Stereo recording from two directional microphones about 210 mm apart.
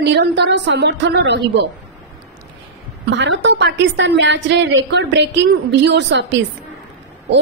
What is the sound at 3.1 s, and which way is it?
A woman's voice, 60° right (ahead or behind).